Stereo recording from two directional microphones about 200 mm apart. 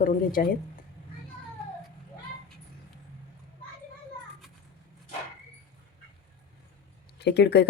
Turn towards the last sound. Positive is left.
turn(degrees=55)  # may be behind; listen again after turning